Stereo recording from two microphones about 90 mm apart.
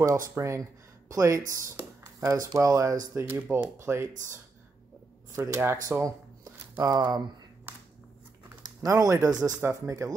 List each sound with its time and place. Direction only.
0.0 s speech: 35° right (ahead or behind)
3.3 s speech: 25° right (ahead or behind); by 7.2 s 50° right (ahead or behind)
8.8 s speech: 35° right (ahead or behind)